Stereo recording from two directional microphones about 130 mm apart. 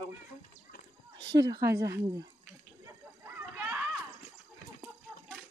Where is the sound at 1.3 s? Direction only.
35° right (ahead or behind).